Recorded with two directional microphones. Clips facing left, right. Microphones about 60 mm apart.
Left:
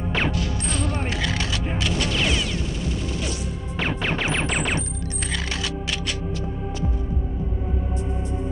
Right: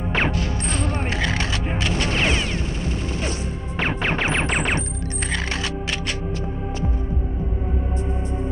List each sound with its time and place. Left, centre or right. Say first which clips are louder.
0.1 s music: right 2 dB; right
3.2 s smash: right 2 dB; right
5.3 s music: right 2 dB; right